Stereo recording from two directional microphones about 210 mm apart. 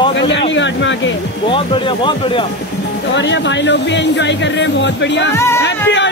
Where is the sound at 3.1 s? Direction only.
60° left (ahead or behind).